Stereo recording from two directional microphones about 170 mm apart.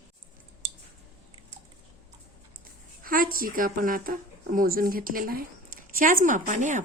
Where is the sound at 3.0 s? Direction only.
55° right (ahead or behind).